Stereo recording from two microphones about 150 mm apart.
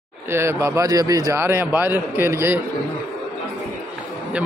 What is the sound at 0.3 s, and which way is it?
A man's voice, 15° right (ahead or behind).